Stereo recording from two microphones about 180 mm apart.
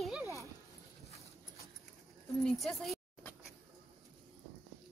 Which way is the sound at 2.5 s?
Centre (ahead or behind).